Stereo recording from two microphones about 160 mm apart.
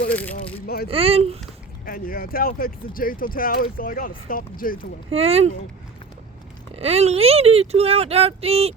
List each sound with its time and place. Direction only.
0.1 s speech: 10° left (ahead or behind)
0.9 s speech: 35° right (ahead or behind)
1.8 s speech: 65° left (ahead or behind)
5.1 s speech: 40° right (ahead or behind)
6.7 s speech: 40° right (ahead or behind)